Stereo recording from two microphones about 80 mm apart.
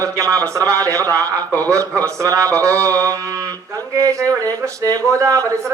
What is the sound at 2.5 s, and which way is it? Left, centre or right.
Mantra, right.